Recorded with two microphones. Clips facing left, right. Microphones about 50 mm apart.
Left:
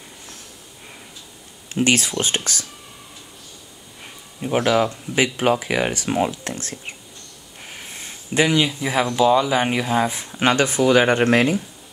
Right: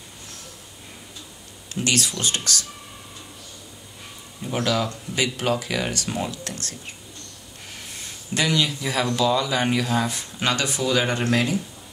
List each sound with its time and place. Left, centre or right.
1.7 s speech: left
4.4 s speech: left
8.4 s speech: left